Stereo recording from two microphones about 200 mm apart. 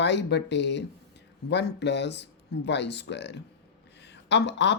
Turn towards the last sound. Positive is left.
turn(degrees=60)  # may be behind; listen again after turning